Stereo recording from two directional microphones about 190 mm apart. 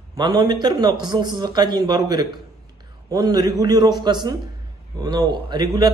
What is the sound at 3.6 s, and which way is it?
A man's voice, 20° right (ahead or behind).